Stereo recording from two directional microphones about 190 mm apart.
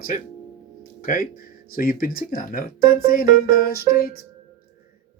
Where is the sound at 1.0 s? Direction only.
45° left (ahead or behind).